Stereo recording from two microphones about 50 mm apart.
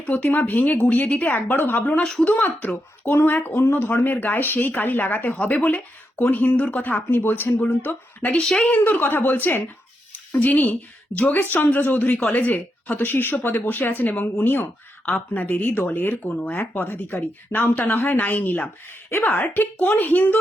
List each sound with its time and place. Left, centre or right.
0.0 s speech: left
3.4 s speech: left
5.4 s speech: left
6.8 s speech: left
8.4 s a woman's voice: centre
8.7 s speech: left
10.1 s a woman's voice: left
13.0 s speech: left
18.9 s speech: left